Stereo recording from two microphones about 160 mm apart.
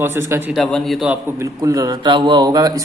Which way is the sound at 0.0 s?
15° right (ahead or behind).